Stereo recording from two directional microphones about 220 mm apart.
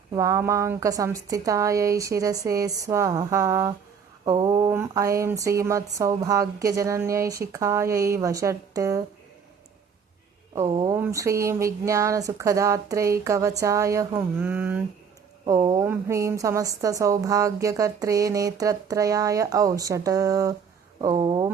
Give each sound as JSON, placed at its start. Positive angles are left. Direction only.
{"t": 0.1, "sound": "a woman's voice", "side_deg": -15}
{"t": 10.7, "sound": "a woman's voice", "side_deg": -20}